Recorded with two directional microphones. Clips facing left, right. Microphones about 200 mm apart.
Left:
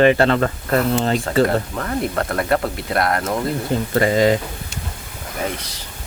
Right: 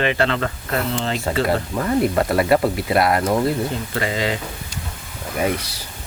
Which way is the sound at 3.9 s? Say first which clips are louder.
Left 10 dB; 40° left (ahead or behind).